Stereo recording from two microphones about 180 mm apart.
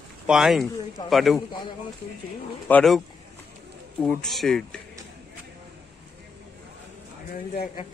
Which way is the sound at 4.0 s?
5° left (ahead or behind).